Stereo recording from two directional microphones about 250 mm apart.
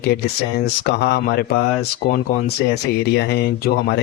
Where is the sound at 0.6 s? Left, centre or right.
Left.